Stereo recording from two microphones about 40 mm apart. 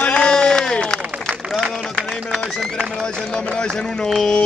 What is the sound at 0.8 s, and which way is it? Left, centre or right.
Applause, centre.